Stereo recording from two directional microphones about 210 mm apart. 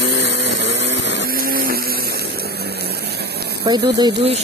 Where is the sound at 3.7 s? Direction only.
20° right (ahead or behind).